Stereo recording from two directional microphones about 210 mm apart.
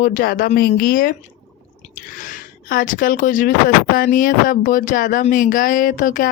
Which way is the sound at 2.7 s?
40° left (ahead or behind).